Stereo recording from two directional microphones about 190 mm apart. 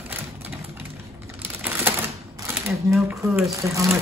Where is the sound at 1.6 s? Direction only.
10° right (ahead or behind).